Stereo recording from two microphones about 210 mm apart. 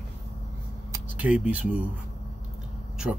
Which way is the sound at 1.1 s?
5° right (ahead or behind).